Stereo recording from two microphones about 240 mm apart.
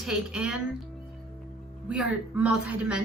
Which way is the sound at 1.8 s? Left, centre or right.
Centre.